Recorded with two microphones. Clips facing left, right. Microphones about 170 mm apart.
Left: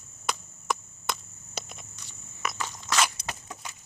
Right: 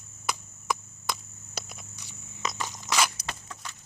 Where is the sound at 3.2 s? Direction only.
15° left (ahead or behind).